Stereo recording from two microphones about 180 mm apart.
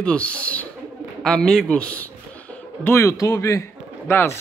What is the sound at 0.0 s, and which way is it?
A man's voice, 5° left (ahead or behind).